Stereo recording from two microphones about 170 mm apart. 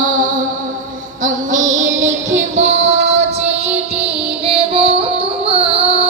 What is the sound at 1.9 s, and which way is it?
Music, 90° right.